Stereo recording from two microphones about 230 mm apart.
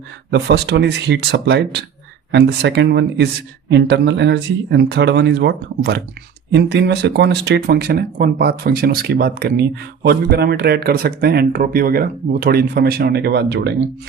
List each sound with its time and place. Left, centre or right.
0.3 s speech: right